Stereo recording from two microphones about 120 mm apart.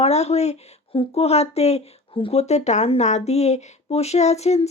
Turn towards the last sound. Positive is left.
turn(degrees=65)  # may be behind; listen again after turning